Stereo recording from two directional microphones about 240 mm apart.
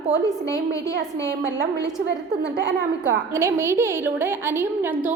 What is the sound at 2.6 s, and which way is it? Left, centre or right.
Speech, right.